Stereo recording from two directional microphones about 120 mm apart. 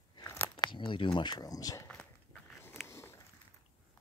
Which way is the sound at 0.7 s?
45° left (ahead or behind).